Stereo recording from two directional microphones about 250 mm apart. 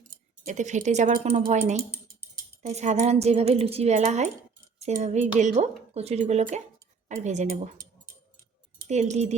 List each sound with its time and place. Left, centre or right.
0.4 s speech: right
8.9 s speech: right